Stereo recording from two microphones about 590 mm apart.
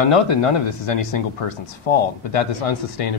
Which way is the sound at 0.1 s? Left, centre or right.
Left.